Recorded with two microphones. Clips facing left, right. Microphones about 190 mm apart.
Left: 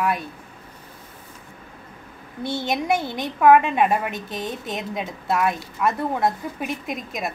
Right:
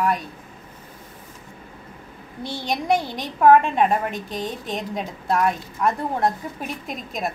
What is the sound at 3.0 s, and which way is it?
Speech, 55° left (ahead or behind).